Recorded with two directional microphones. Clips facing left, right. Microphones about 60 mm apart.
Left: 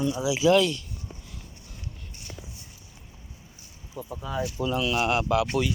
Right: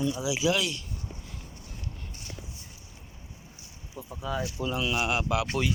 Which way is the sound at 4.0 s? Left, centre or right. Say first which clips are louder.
Left 5 dB; right.